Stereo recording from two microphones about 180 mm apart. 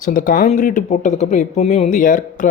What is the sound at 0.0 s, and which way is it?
Speech, 45° left (ahead or behind).